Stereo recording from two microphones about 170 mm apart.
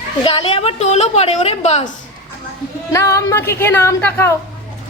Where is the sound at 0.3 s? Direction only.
35° left (ahead or behind).